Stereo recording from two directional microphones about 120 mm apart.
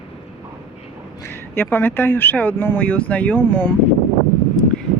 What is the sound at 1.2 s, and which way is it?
Speech, 20° left (ahead or behind).